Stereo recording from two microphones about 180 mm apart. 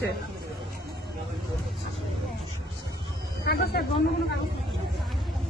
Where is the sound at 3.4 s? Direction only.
60° left (ahead or behind).